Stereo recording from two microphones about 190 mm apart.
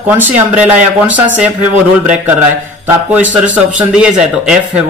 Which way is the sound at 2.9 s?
10° right (ahead or behind).